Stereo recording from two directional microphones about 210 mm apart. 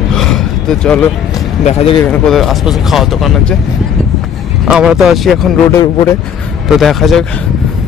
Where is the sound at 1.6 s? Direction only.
30° left (ahead or behind).